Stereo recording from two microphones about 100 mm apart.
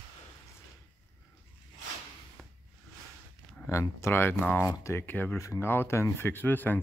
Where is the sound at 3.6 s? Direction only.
25° left (ahead or behind).